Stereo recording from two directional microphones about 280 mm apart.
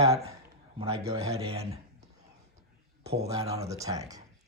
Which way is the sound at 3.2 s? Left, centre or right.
Centre.